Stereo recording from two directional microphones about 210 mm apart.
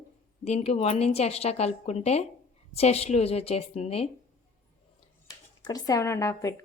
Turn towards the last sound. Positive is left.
turn(degrees=15)  # may be behind; listen again after turning